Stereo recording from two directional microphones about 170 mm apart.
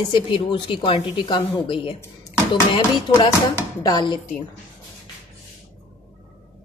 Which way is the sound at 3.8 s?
25° left (ahead or behind).